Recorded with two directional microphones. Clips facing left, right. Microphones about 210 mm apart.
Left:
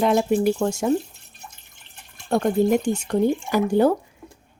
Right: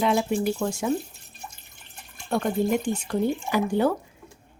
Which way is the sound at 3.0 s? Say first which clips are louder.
Left 4 dB; 45° left (ahead or behind).